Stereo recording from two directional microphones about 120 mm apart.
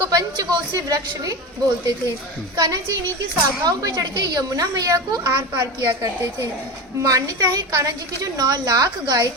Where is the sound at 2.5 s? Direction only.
35° right (ahead or behind).